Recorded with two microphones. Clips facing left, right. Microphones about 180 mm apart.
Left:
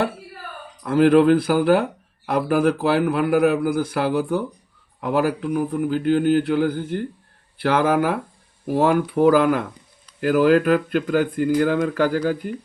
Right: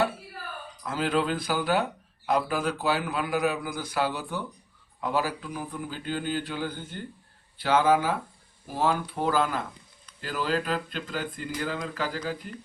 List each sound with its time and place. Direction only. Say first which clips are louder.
0.9 s speech: left 13 dB; 60° left (ahead or behind)